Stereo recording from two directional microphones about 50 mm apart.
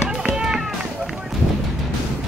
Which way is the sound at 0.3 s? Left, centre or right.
Centre.